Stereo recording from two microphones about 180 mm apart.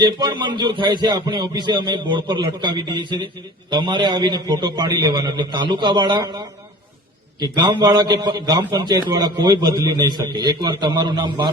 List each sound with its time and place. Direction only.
0.0 s a man's voice: 25° right (ahead or behind)